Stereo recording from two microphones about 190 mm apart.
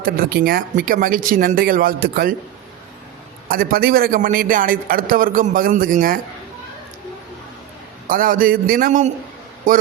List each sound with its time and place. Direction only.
0.0 s a man's voice: 50° right (ahead or behind)
3.5 s a man's voice: 50° right (ahead or behind)
8.0 s a man's voice: 45° right (ahead or behind)